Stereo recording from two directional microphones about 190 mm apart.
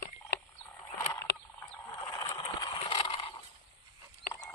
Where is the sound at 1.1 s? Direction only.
20° left (ahead or behind).